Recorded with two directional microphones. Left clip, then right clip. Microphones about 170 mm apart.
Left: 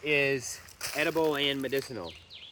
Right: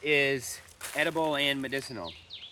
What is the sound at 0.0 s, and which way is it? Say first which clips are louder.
Speech: right 1 dB; 35° right (ahead or behind).